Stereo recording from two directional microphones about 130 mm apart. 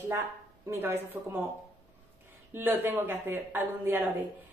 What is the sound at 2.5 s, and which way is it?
A woman's voice, 15° right (ahead or behind).